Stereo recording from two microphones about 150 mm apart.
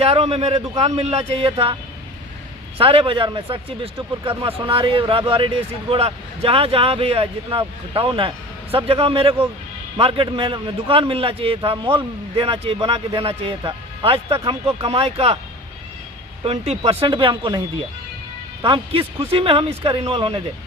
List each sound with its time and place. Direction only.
0.0 s a man's voice: 45° right (ahead or behind)
2.7 s a man's voice: 35° right (ahead or behind)
16.4 s a man's voice: 45° right (ahead or behind)
18.6 s a man's voice: 35° right (ahead or behind)